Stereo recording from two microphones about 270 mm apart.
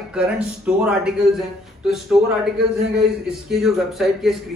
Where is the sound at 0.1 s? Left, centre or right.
Centre.